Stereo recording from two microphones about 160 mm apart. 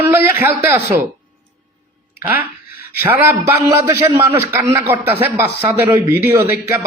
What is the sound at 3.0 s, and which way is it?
A man's voice, 15° right (ahead or behind).